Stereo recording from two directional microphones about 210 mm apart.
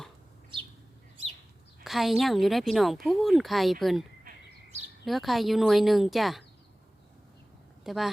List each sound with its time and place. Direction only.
1.8 s a woman's voice: centre (ahead or behind)
4.2 s bird: 40° right (ahead or behind)
5.0 s a woman's voice: centre (ahead or behind)
7.9 s a woman's voice: centre (ahead or behind)